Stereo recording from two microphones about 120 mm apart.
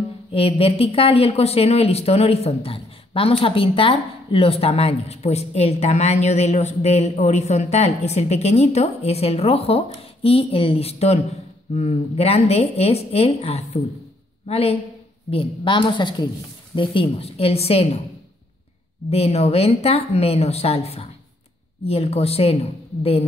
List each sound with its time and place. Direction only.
0.3 s speech: 50° left (ahead or behind)
15.2 s a woman's voice: 45° left (ahead or behind)
16.7 s speech: 50° left (ahead or behind)
19.0 s speech: 60° left (ahead or behind)